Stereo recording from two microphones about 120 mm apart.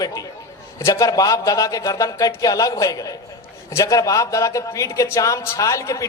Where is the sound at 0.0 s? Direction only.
30° left (ahead or behind).